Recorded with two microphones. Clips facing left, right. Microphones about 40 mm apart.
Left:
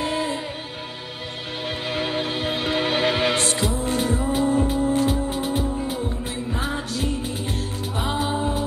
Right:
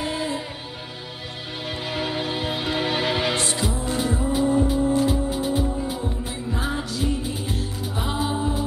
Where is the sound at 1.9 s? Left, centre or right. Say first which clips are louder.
Left 1 dB; left.